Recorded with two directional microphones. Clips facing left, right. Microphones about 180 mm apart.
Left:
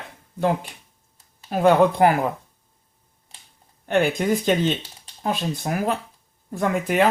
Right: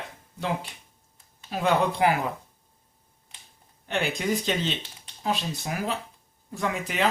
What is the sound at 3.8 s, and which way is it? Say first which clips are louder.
Speech: left 7 dB; 50° left (ahead or behind).